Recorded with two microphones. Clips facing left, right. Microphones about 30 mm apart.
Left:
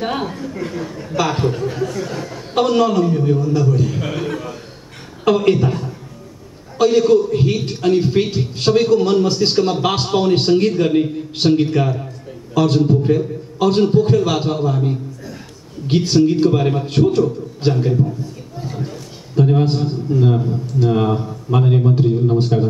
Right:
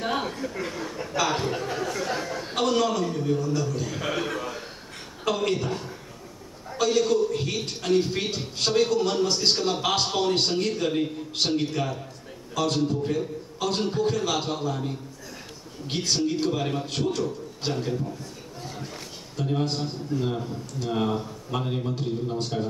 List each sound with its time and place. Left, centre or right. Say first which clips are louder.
0.2 s a man's voice: left 6 dB; centre
1.5 s speech: left 7 dB; centre
2.0 s a sound: left 2 dB; centre
2.5 s a man's voice: left 9 dB; centre
5.2 s a man's voice: left 11 dB; left
6.8 s a man's voice: left 9 dB; centre
18.6 s a sound: left 11 dB; centre
19.3 s a man's voice: left 11 dB; left